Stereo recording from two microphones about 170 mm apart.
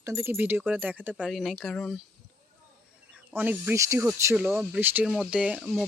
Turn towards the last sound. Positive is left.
turn(degrees=-5)  # may be behind; listen again after turning